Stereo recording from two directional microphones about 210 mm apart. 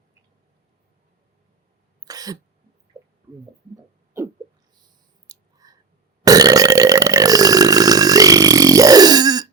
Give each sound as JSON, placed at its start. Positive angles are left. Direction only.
{"t": 2.0, "sound": "throat clearing", "side_deg": -15}
{"t": 2.9, "sound": "a sound", "side_deg": -25}
{"t": 5.3, "sound": "whispering", "side_deg": -15}
{"t": 6.2, "sound": "burping", "side_deg": -15}